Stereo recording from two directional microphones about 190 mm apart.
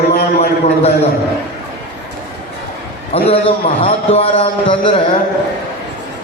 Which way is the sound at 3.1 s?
30° left (ahead or behind).